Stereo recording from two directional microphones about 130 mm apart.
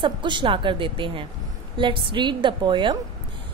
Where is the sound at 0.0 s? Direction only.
40° right (ahead or behind).